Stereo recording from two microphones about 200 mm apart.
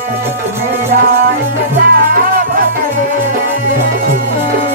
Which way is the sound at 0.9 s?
45° right (ahead or behind).